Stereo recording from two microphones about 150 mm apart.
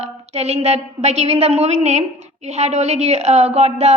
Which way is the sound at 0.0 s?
45° right (ahead or behind).